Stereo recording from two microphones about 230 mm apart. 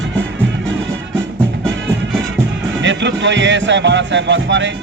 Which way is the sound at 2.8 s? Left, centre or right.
Right.